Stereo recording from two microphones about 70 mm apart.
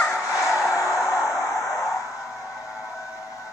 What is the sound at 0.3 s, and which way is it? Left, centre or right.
Music, left.